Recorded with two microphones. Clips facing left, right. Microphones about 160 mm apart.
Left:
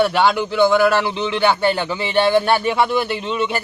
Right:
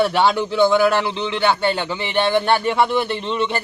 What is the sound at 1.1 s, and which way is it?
Speech, 15° left (ahead or behind).